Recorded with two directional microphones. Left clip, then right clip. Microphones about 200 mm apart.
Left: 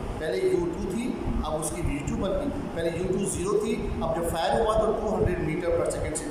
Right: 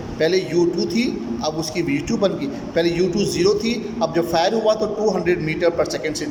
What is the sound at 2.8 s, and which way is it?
A man's voice, 40° right (ahead or behind).